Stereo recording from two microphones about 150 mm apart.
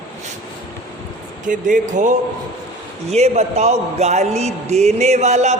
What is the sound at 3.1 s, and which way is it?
A man's voice, 45° right (ahead or behind).